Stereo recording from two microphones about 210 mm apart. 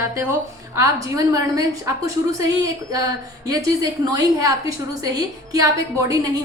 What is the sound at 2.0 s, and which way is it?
A woman's voice, 15° right (ahead or behind).